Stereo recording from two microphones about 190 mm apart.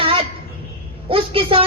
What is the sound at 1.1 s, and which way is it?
Speech, 30° right (ahead or behind).